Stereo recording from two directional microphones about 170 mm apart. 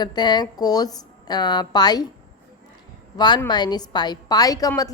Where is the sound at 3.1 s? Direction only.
25° left (ahead or behind).